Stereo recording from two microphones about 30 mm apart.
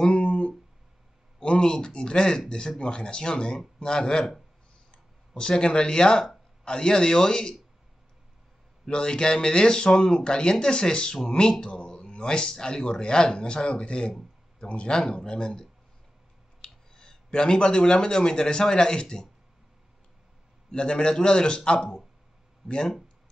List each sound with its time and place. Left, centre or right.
0.2 s a sound: left
1.4 s speech: left
8.8 s speech: left
11.6 s a sound: left
12.2 s speech: left
20.7 s speech: left